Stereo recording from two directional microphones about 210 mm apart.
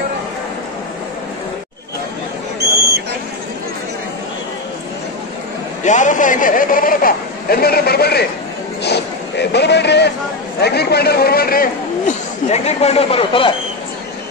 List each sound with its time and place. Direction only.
5.9 s a man's voice: 35° left (ahead or behind)
8.8 s vehicle: 55° left (ahead or behind)
10.6 s a man's voice: 50° left (ahead or behind)
12.4 s speech: 30° left (ahead or behind)